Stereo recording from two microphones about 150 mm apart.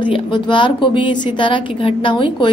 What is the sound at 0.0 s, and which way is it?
A woman's voice, 30° left (ahead or behind).